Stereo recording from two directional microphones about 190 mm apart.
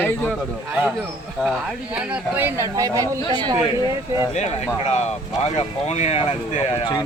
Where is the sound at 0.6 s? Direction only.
10° right (ahead or behind).